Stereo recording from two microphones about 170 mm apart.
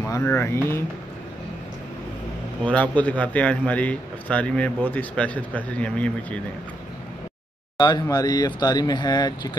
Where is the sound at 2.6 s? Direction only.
10° left (ahead or behind).